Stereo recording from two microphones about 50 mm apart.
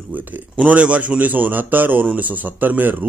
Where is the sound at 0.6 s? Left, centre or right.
Right.